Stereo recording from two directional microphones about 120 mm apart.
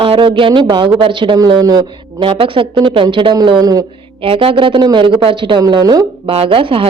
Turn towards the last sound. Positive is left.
turn(degrees=-50)  # may be behind; listen again after turning